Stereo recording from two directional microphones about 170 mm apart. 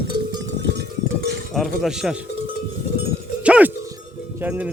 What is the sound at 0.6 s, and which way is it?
Music, 85° right.